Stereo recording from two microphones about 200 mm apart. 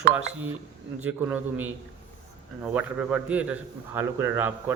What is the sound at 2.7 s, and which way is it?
Speech, 5° right (ahead or behind).